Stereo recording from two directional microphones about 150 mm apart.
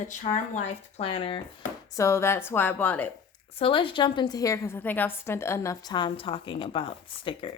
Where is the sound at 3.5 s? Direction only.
35° left (ahead or behind).